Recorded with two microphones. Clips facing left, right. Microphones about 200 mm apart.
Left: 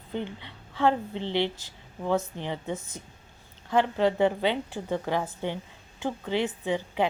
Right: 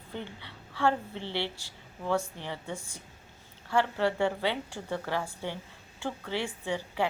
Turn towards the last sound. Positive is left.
turn(degrees=20)  # may be behind; listen again after turning